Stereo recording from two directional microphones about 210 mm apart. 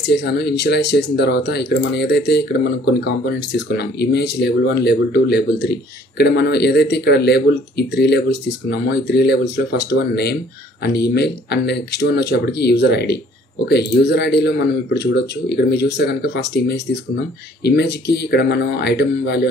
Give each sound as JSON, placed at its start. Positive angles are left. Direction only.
{"t": 0.0, "sound": "speech", "side_deg": 55}